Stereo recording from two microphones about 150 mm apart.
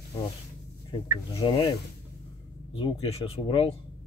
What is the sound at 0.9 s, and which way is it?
Speech, 35° left (ahead or behind).